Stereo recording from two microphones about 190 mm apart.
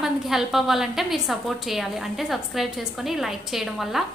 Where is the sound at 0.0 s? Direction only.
Centre (ahead or behind).